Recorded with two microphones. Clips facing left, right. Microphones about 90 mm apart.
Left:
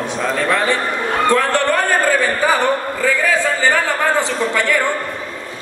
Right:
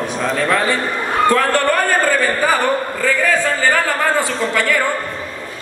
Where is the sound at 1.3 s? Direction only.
20° left (ahead or behind).